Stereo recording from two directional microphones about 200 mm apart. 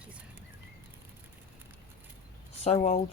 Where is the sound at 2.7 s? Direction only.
30° left (ahead or behind).